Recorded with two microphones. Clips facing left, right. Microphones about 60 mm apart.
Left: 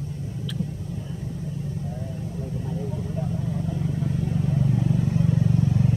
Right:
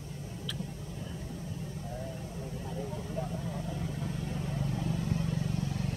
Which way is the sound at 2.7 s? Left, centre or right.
Centre.